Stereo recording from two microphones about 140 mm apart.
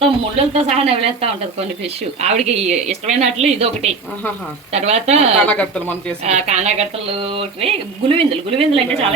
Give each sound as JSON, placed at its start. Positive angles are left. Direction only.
{"t": 0.0, "sound": "speech", "side_deg": -45}
{"t": 5.5, "sound": "speech", "side_deg": 10}
{"t": 6.2, "sound": "speech", "side_deg": -55}